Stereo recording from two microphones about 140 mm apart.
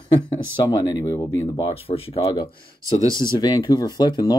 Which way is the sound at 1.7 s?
45° left (ahead or behind).